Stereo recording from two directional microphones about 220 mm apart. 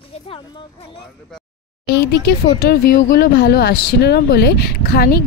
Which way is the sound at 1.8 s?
50° left (ahead or behind).